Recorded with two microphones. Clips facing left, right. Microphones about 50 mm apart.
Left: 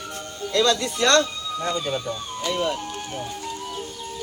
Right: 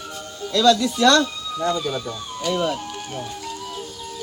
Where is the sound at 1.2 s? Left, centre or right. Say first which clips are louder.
Right 2 dB; centre.